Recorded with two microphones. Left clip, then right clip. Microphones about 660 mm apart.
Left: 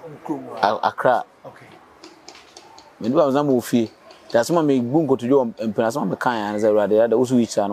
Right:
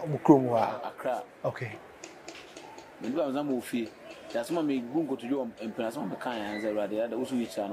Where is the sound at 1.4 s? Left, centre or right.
Right.